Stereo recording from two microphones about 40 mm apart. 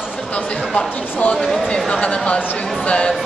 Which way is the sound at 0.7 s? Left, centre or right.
Left.